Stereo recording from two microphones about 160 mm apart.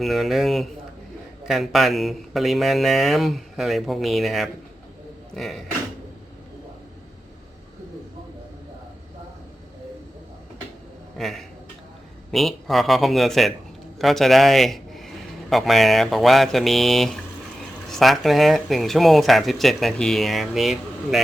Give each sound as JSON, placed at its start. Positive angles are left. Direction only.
{"t": 0.0, "sound": "speech", "side_deg": 0}
{"t": 11.2, "sound": "a man's voice", "side_deg": 0}